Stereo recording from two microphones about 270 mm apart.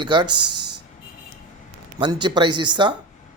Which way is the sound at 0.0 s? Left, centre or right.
Centre.